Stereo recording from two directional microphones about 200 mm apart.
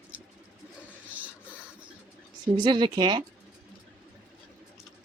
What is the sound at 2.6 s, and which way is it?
Speech, 20° right (ahead or behind).